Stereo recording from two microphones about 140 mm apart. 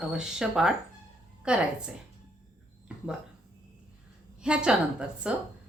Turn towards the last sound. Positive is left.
turn(degrees=-5)  # may be behind; listen again after turning